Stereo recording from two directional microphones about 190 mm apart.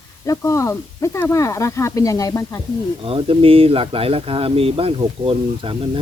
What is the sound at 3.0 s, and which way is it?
Speech, 30° right (ahead or behind).